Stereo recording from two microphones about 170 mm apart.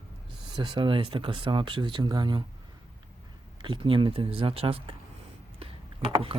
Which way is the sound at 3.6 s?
30° right (ahead or behind).